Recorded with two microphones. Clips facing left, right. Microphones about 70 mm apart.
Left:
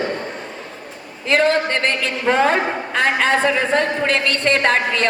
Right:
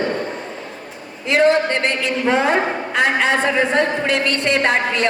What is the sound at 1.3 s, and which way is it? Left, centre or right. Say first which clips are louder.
A man's voice: right 2 dB; left.